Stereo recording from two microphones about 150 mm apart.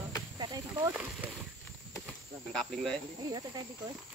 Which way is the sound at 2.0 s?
5° left (ahead or behind).